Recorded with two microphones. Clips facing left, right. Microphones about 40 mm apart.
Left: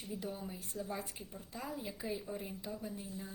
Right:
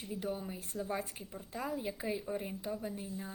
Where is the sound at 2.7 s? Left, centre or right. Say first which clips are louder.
Right 4 dB; right.